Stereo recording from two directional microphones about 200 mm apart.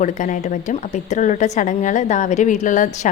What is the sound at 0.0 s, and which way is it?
A woman's voice, 40° left (ahead or behind).